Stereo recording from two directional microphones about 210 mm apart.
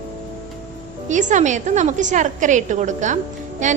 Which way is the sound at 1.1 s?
35° right (ahead or behind).